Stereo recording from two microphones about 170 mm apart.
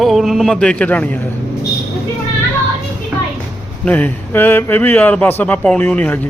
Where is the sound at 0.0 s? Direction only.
Centre (ahead or behind).